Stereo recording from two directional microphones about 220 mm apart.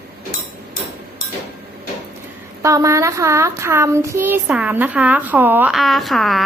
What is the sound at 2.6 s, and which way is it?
A child's voice, 15° right (ahead or behind).